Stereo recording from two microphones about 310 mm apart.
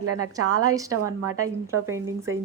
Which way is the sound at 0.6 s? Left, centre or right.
Centre.